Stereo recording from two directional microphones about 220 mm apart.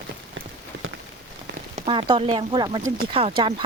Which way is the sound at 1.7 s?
25° right (ahead or behind).